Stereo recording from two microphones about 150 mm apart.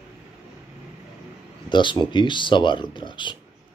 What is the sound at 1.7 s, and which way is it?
Speech, 30° left (ahead or behind).